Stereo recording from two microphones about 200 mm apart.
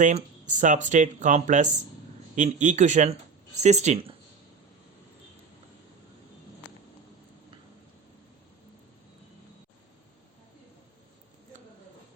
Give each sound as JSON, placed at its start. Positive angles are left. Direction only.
{"t": 0.0, "sound": "speech", "side_deg": -40}